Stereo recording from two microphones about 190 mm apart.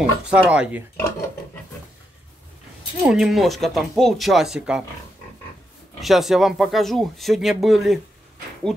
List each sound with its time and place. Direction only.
0.3 s speech: 5° right (ahead or behind)
0.9 s dishes: 15° left (ahead or behind)
3.0 s speech: centre (ahead or behind)
5.9 s speech: centre (ahead or behind)